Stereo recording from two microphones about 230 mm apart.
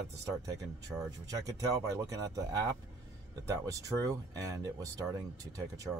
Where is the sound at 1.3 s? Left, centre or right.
Centre.